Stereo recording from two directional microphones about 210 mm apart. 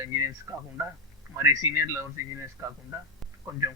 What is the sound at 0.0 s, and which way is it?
A man's voice, 15° right (ahead or behind).